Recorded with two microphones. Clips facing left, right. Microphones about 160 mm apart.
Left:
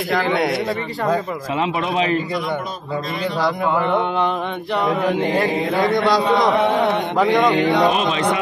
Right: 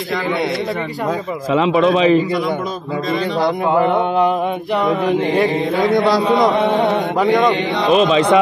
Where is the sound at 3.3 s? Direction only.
20° right (ahead or behind).